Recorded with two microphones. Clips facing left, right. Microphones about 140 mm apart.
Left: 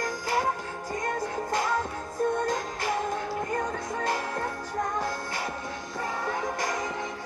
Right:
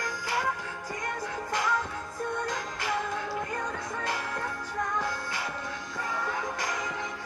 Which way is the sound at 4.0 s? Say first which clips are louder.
Left 5 dB; 40° left (ahead or behind).